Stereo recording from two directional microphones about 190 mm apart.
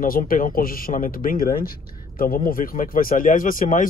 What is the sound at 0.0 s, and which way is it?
A man's voice, 45° left (ahead or behind).